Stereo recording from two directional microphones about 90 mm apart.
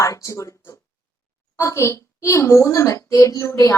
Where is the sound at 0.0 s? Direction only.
35° left (ahead or behind).